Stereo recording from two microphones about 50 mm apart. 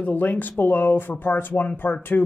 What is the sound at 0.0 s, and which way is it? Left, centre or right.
Speech, left.